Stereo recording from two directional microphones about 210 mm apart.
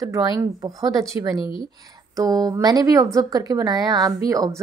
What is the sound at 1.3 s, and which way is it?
Speech, 25° left (ahead or behind).